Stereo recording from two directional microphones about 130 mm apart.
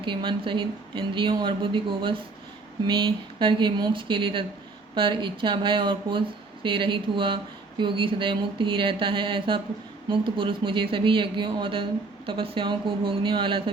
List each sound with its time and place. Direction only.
0.0 s speech: 40° right (ahead or behind)